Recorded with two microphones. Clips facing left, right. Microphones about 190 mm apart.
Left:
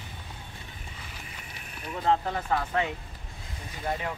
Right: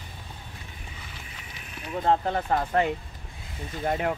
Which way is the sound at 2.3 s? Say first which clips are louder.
Right 4 dB; 45° right (ahead or behind).